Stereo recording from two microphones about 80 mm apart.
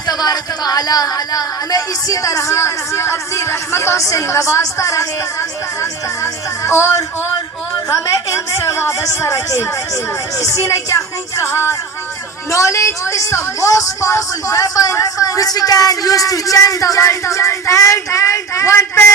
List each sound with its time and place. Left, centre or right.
0.1 s speech: left